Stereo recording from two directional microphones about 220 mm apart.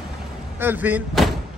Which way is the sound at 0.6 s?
10° right (ahead or behind).